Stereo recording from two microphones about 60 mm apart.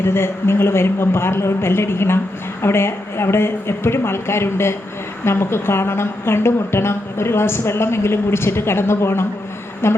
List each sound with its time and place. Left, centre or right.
0.0 s a woman's voice: left